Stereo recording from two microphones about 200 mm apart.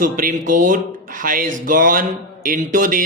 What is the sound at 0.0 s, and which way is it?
Speech, 45° right (ahead or behind).